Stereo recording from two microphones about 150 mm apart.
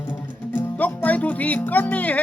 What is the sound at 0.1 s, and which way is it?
Music, 10° left (ahead or behind).